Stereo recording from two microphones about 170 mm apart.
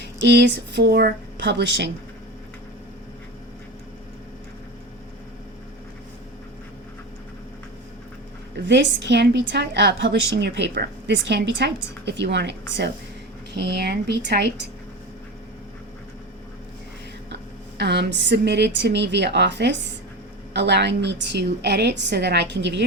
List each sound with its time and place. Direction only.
0.0 s a woman's voice: 90° right
8.5 s a woman's voice: 90° right
13.5 s a woman's voice: 75° right (ahead or behind)
17.7 s a woman's voice: 80° right